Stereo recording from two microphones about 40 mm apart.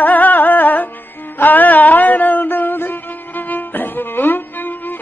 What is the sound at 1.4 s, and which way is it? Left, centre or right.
Music, left.